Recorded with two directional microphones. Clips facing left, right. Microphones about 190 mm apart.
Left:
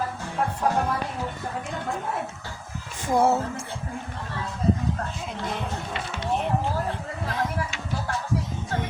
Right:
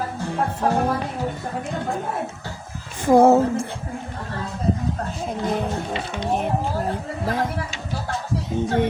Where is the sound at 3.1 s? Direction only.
55° right (ahead or behind).